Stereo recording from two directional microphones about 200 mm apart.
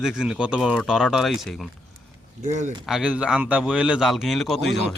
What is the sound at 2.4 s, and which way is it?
Speech, 35° right (ahead or behind).